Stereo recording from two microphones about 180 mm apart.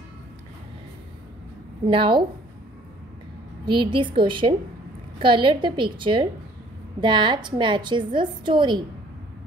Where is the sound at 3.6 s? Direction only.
25° right (ahead or behind).